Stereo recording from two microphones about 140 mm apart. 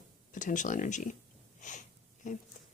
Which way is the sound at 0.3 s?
65° left (ahead or behind).